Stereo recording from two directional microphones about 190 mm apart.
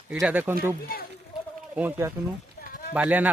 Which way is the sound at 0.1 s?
5° right (ahead or behind).